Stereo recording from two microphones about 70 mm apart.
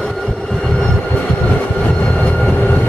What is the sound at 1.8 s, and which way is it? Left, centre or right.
Train, left.